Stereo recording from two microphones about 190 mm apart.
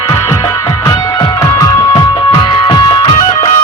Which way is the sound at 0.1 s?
20° left (ahead or behind).